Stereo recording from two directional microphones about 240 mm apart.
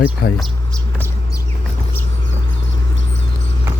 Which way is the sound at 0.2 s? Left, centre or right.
Left.